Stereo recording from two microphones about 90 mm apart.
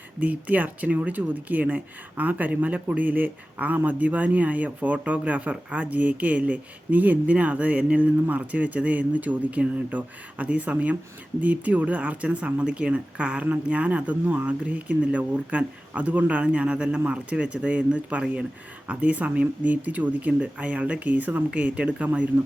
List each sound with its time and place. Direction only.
0.2 s speech: 15° right (ahead or behind)